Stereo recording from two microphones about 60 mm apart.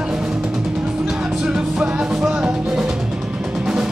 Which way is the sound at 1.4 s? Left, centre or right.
Centre.